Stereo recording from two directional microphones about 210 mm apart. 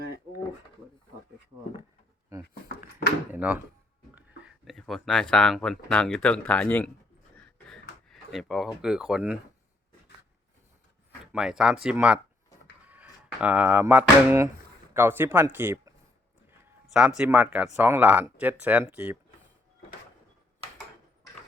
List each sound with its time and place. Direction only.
3.3 s speech: 5° right (ahead or behind)
7.3 s a sound: 5° left (ahead or behind)
11.3 s speech: 5° right (ahead or behind)
16.8 s speech: 5° right (ahead or behind)